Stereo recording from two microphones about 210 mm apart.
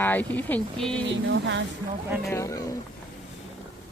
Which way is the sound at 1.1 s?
60° right (ahead or behind).